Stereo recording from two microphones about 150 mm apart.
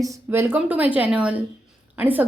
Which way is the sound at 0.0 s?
20° right (ahead or behind).